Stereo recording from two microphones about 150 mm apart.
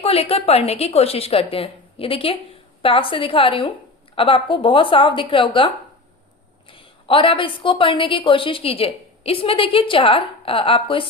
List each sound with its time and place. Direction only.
0.0 s a woman's voice: 40° left (ahead or behind)